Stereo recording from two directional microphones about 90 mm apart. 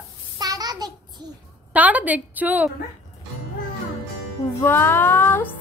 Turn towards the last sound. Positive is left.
turn(degrees=25)  # may be behind; listen again after turning